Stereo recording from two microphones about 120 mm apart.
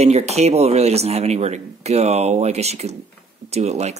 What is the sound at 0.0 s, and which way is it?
A man's voice, 60° right (ahead or behind).